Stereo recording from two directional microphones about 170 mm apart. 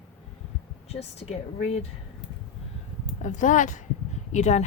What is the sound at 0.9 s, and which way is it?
Speech, 40° left (ahead or behind).